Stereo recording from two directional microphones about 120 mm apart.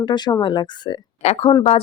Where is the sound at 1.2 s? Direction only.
65° left (ahead or behind).